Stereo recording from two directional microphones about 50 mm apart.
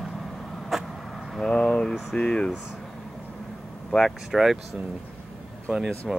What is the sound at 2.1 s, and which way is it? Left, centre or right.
Air conditioning, centre.